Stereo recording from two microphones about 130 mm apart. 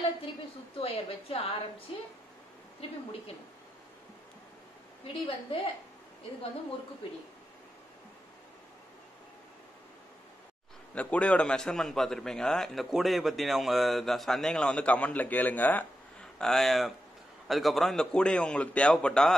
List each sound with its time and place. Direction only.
0.7 s a woman's voice: 45° left (ahead or behind)
5.0 s a woman's voice: 40° left (ahead or behind)
11.0 s a man's voice: 10° left (ahead or behind)